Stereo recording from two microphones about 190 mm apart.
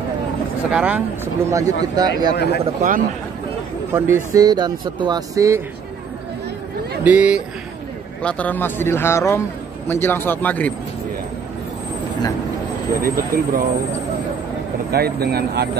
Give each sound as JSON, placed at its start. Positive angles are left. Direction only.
{"t": 0.7, "sound": "speech", "side_deg": -5}
{"t": 2.3, "sound": "speech", "side_deg": 60}
{"t": 3.9, "sound": "speech", "side_deg": -15}
{"t": 7.0, "sound": "speech", "side_deg": -10}
{"t": 8.2, "sound": "speech", "side_deg": 5}
{"t": 13.0, "sound": "speech", "side_deg": -50}
{"t": 14.9, "sound": "speech", "side_deg": -55}